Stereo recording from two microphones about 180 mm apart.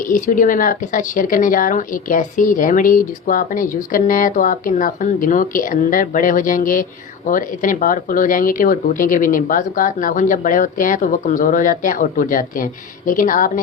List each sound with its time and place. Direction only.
0.1 s a woman's voice: 50° left (ahead or behind)